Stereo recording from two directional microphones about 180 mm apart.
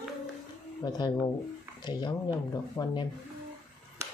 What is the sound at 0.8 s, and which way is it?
Speech, 25° left (ahead or behind).